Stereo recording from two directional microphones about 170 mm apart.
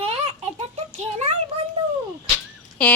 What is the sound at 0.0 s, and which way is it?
Baby laughter, 35° right (ahead or behind).